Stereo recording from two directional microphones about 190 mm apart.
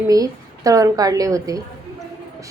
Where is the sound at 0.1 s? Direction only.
20° right (ahead or behind).